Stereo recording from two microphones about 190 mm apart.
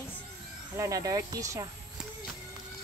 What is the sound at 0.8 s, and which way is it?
Speech, 15° right (ahead or behind).